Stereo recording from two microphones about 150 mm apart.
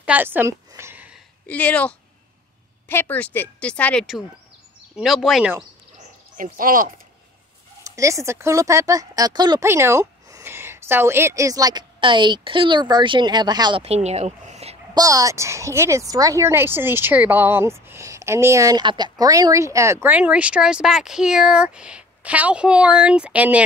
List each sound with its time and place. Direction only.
0.0 s a sound: 10° right (ahead or behind)
1.5 s speech: 10° left (ahead or behind)
4.9 s speech: centre (ahead or behind)
6.3 s speech: 65° right (ahead or behind)
7.8 s speech: 20° right (ahead or behind)
9.7 s a woman's voice: 15° right (ahead or behind)
13.8 s a sound: 45° right (ahead or behind)
15.0 s a woman's voice: 25° right (ahead or behind)